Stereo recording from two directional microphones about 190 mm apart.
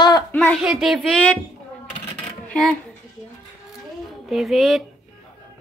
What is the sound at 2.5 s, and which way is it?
Speech, 5° left (ahead or behind).